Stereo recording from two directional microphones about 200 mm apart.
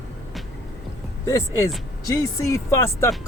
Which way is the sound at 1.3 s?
15° left (ahead or behind).